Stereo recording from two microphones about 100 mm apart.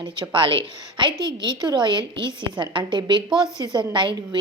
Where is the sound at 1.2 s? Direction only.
45° right (ahead or behind).